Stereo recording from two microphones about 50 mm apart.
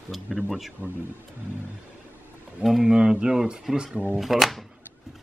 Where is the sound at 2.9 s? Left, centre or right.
Centre.